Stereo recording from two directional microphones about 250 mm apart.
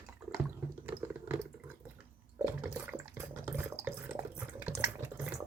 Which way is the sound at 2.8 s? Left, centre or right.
Centre.